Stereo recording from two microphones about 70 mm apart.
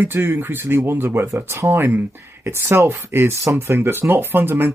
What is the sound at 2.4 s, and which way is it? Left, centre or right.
Speech, right.